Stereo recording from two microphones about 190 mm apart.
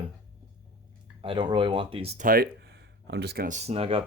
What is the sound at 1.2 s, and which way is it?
Speech, 25° right (ahead or behind).